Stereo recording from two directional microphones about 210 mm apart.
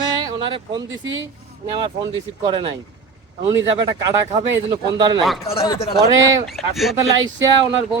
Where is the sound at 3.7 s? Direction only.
25° right (ahead or behind).